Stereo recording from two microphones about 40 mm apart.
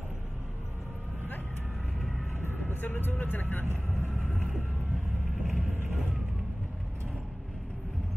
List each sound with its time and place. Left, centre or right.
2.4 s speech: left
5.4 s vehicle: centre